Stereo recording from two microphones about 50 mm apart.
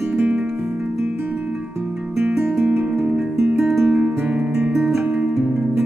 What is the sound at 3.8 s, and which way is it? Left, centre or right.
Music, right.